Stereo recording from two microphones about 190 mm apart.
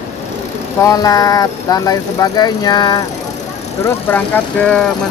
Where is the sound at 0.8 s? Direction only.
20° left (ahead or behind).